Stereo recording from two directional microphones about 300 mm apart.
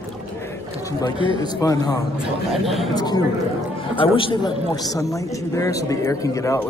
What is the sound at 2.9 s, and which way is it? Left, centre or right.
Speech, centre.